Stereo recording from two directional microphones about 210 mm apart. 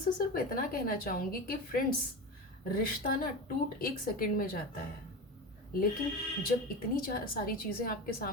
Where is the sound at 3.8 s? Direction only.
45° left (ahead or behind).